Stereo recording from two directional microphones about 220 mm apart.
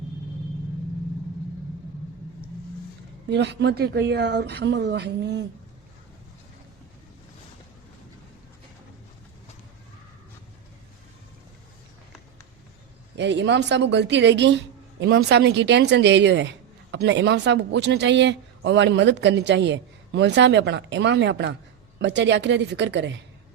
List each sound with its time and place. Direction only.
3.2 s speech: 50° right (ahead or behind)
13.1 s speech: 55° right (ahead or behind)